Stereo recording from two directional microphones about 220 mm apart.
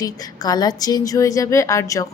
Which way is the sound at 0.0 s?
15° left (ahead or behind).